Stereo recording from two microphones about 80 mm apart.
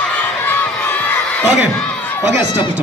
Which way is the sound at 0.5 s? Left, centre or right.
Left.